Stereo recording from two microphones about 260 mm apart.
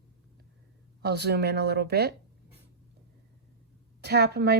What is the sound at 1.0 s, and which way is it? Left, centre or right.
Speech, right.